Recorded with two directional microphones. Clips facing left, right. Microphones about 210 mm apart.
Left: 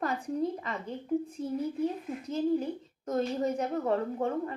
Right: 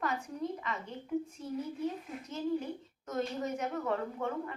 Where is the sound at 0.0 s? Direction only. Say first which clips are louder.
Left 5 dB; 35° left (ahead or behind).